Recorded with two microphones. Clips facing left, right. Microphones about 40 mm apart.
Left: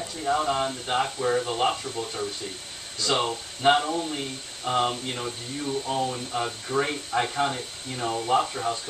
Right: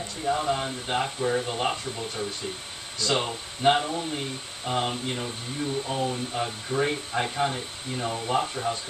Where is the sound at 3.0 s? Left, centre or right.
Centre.